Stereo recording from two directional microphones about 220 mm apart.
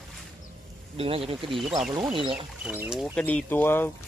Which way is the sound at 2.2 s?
25° right (ahead or behind).